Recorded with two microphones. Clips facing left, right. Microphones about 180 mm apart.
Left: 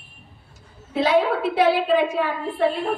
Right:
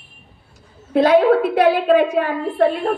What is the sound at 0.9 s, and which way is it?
A woman's voice, 50° right (ahead or behind).